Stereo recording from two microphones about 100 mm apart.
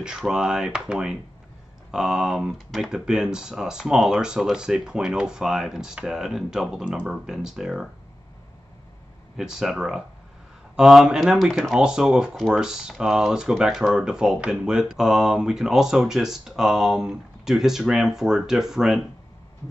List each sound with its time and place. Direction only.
0.0 s speech: 5° right (ahead or behind)
9.4 s speech: 5° right (ahead or behind)